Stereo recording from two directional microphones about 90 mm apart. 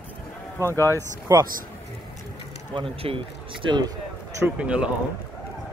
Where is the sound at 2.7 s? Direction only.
80° right.